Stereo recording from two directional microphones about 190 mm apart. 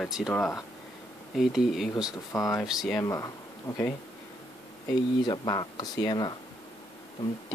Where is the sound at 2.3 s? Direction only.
15° left (ahead or behind).